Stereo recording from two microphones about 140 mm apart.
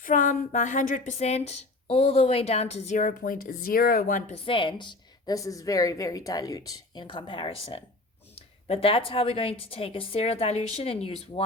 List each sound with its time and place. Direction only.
0.0 s a woman's voice: 70° left (ahead or behind)
4.4 s a woman's voice: 40° left (ahead or behind)